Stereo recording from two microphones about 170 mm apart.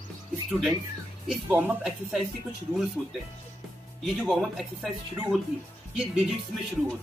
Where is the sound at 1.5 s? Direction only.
10° right (ahead or behind).